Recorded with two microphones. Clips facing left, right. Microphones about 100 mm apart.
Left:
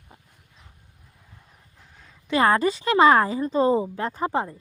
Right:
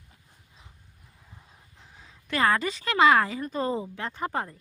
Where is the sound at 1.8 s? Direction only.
Centre (ahead or behind).